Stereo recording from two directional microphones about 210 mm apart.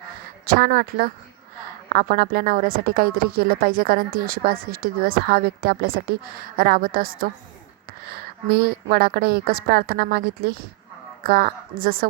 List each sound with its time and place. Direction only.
0.4 s a woman's voice: 45° right (ahead or behind)